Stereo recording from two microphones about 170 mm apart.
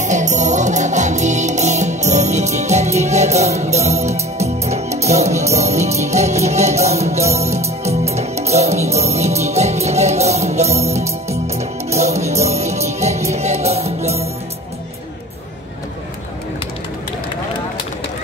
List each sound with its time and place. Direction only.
0.0 s music: 45° right (ahead or behind)